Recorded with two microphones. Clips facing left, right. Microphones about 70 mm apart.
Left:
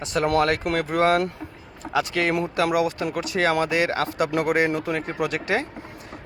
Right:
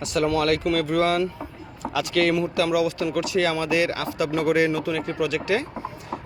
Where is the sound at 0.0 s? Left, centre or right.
Left.